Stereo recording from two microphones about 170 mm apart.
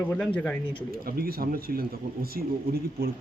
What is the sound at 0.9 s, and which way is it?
Speech, 60° right (ahead or behind).